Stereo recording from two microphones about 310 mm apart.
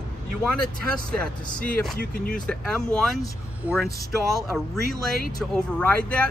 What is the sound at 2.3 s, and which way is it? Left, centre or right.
Speech, centre.